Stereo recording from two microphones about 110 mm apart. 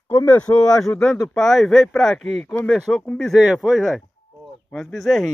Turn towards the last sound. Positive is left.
turn(degrees=0)  # may be behind; listen again after turning